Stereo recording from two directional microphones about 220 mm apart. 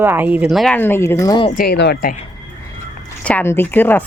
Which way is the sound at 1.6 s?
50° left (ahead or behind).